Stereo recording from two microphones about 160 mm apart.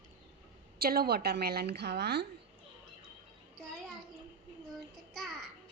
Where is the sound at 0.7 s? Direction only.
75° right (ahead or behind); by 2.3 s 90° right.